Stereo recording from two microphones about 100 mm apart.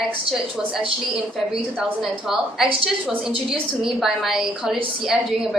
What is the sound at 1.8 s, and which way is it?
Speech, 5° right (ahead or behind).